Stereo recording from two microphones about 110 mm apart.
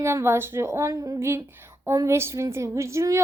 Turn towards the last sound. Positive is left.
turn(degrees=-25)  # may be behind; listen again after turning